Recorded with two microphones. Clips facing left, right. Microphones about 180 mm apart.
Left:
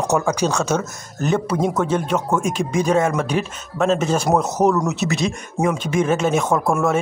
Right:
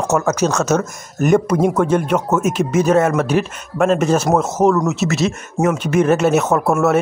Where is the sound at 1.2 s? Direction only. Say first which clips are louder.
Right 6 dB; 15° right (ahead or behind).